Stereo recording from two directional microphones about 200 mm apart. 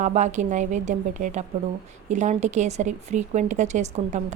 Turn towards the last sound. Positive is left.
turn(degrees=-35)  # may be behind; listen again after turning